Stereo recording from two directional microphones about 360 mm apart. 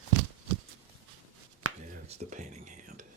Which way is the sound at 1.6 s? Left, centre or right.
Right.